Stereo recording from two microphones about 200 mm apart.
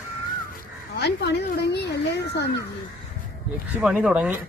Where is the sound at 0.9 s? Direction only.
55° left (ahead or behind).